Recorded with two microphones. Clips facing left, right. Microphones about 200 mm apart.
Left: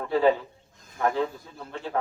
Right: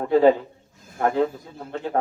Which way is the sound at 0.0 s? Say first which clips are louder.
Right 5 dB; 40° right (ahead or behind).